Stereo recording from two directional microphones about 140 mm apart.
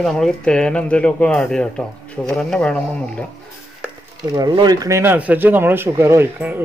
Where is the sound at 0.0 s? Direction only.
5° left (ahead or behind).